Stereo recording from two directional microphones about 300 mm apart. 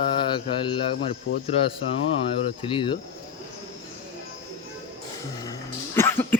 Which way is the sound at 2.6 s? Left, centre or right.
Centre.